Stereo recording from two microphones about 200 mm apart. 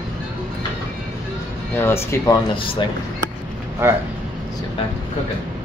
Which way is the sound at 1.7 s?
10° left (ahead or behind).